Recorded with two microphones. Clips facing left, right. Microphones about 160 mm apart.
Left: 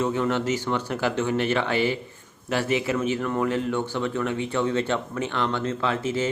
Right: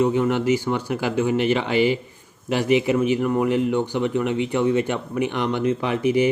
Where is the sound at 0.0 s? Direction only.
15° right (ahead or behind).